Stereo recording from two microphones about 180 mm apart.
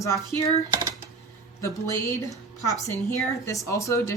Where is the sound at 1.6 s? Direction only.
15° left (ahead or behind).